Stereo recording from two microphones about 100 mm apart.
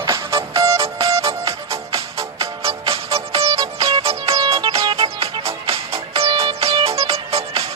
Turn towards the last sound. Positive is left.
turn(degrees=-80)